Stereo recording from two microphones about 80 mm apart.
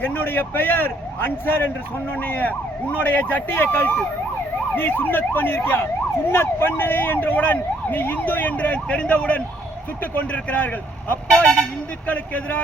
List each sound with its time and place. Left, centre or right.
0.0 s emergency vehicle: left
11.3 s speech: centre
12.0 s emergency vehicle: left